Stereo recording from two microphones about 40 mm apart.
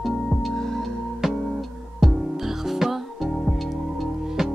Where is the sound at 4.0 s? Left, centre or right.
Centre.